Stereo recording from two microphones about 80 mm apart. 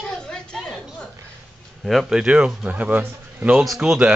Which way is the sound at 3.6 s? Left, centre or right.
Centre.